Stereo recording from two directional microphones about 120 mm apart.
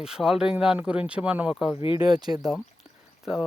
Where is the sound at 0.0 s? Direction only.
5° right (ahead or behind).